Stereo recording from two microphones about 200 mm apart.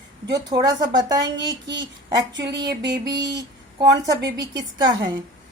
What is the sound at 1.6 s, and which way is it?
Speech, 65° right (ahead or behind).